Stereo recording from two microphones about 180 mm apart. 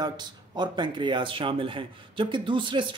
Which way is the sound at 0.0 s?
25° right (ahead or behind).